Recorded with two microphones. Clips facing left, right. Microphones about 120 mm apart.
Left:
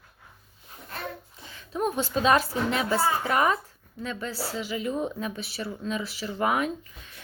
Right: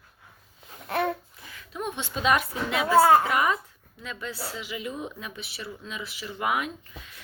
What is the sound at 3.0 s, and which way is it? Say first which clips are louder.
Speech: right 8 dB; 65° right (ahead or behind).